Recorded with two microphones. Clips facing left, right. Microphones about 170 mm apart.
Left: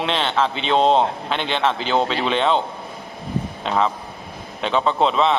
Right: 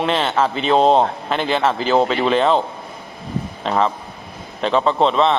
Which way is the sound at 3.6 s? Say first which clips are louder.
Right 3 dB; centre (ahead or behind).